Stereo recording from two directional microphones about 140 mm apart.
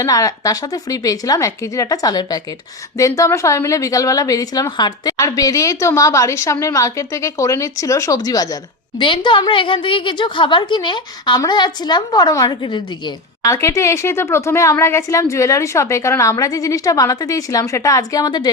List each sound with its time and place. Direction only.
0.0 s a woman's voice: 25° left (ahead or behind)
9.0 s a woman's voice: 35° left (ahead or behind)